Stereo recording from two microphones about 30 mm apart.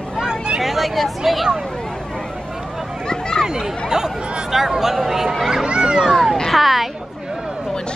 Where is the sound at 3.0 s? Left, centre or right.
Left.